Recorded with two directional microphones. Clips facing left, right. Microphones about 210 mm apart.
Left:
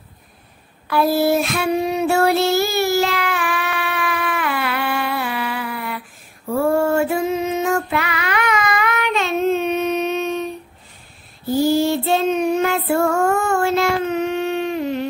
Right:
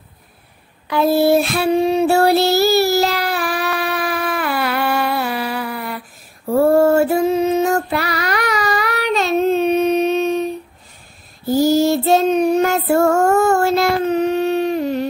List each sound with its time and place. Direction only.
0.8 s child singing: 25° right (ahead or behind); by 6.0 s 40° right (ahead or behind)
6.5 s female singing: 40° right (ahead or behind)
11.4 s child singing: 40° right (ahead or behind)